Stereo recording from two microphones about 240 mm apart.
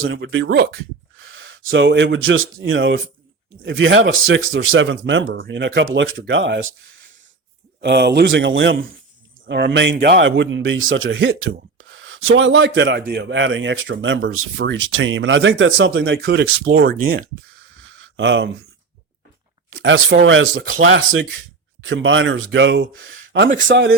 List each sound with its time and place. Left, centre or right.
0.0 s speech: right
17.8 s a sound: right
19.7 s speech: right